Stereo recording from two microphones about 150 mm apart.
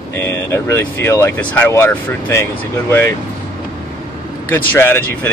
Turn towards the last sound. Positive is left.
turn(degrees=15)  # may be behind; listen again after turning